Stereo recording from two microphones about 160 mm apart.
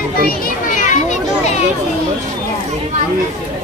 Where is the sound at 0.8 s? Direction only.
50° left (ahead or behind).